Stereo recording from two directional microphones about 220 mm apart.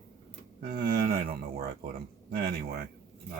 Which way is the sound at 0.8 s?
45° right (ahead or behind).